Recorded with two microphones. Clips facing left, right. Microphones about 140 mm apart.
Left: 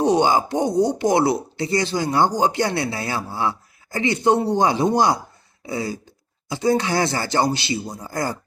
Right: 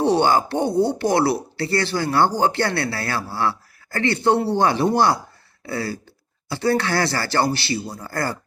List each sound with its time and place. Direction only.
0.0 s speech: 15° left (ahead or behind)